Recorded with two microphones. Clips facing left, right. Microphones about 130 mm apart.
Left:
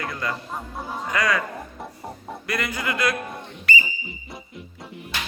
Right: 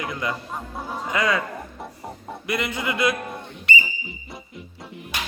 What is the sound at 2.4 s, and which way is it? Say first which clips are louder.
Speech: right 1 dB; 20° right (ahead or behind).